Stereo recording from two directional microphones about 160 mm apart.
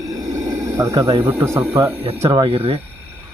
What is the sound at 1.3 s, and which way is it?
Speech, 15° right (ahead or behind).